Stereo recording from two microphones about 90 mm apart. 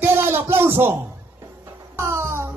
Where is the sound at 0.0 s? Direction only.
25° right (ahead or behind).